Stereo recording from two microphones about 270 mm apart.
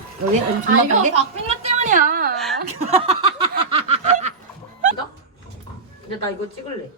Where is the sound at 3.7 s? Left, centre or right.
Right.